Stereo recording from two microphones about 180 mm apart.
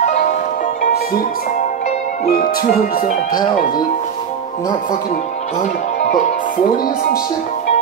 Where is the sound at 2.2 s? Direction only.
55° left (ahead or behind).